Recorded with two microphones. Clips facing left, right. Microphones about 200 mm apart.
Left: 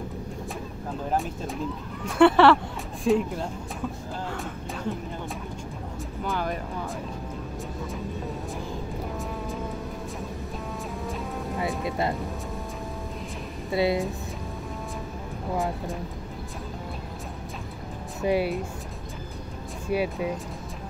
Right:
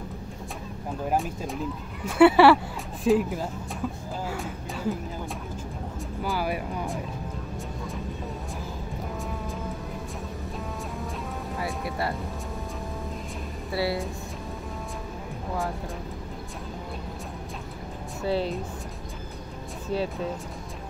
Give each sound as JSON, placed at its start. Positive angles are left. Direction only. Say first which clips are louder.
{"t": 1.1, "sound": "speech", "louder": "even", "side_deg": 0}
{"t": 6.2, "sound": "speech", "louder": "right 1 dB", "side_deg": -5}
{"t": 11.6, "sound": "speech", "louder": "left 3 dB", "side_deg": 20}
{"t": 13.7, "sound": "speech", "louder": "left 4 dB", "side_deg": 20}
{"t": 18.2, "sound": "speech", "louder": "left 3 dB", "side_deg": 15}
{"t": 19.9, "sound": "speech", "louder": "left 2 dB", "side_deg": 10}